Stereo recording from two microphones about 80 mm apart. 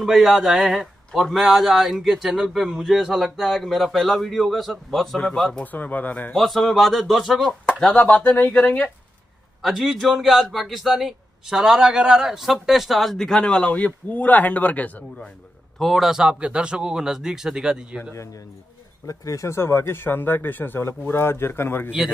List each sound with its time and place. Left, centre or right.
0.0 s a man's voice: centre
5.6 s speech: left
6.3 s a man's voice: centre
7.6 s speech: centre
9.6 s a man's voice: centre
15.8 s speech: centre
18.1 s a man's voice: left